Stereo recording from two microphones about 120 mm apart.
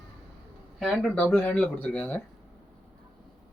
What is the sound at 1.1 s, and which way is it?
Speech, 15° left (ahead or behind).